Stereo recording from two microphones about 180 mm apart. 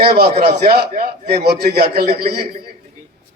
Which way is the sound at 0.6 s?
55° right (ahead or behind).